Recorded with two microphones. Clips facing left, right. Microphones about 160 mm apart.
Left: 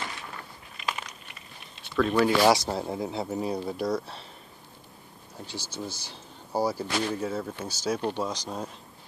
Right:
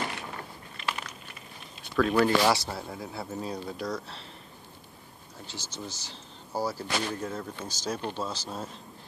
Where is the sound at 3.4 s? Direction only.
10° left (ahead or behind).